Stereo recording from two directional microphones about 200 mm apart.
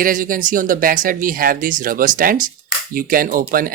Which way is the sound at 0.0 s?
45° right (ahead or behind).